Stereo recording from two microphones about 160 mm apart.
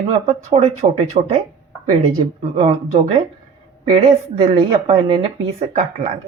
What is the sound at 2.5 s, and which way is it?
Speech, 40° right (ahead or behind).